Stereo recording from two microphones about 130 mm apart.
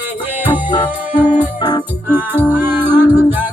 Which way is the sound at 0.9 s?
10° right (ahead or behind).